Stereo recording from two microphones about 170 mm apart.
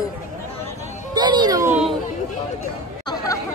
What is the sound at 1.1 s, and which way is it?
Speech, 25° right (ahead or behind).